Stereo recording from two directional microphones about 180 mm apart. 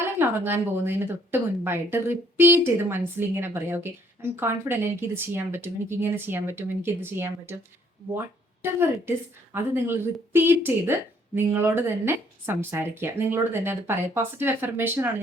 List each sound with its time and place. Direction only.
0.0 s speech: 10° right (ahead or behind)
8.6 s speech: 15° right (ahead or behind)